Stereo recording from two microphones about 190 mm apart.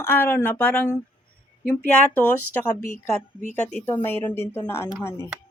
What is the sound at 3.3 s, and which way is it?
Speech, 40° left (ahead or behind).